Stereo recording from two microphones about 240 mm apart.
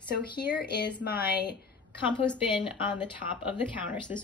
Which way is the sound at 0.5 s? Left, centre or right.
Left.